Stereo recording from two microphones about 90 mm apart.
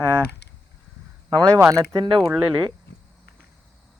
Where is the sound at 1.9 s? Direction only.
55° right (ahead or behind).